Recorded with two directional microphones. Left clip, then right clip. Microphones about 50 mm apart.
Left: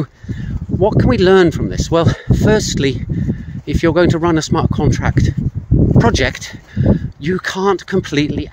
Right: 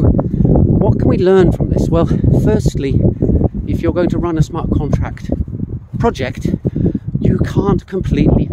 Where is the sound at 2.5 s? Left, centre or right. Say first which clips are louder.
Left 2 dB; right.